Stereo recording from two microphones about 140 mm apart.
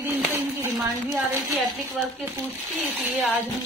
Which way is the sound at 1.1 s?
Centre (ahead or behind).